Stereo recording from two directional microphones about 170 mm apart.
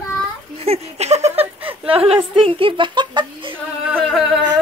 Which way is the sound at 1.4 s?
10° right (ahead or behind).